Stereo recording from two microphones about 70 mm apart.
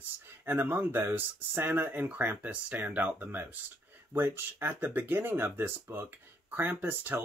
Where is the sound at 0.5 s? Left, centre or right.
Right.